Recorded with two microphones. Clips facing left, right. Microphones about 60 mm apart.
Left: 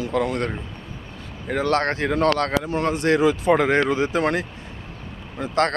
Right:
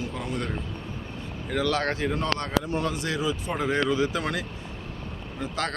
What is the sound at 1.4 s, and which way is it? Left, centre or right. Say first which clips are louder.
Speech: left 5 dB; left.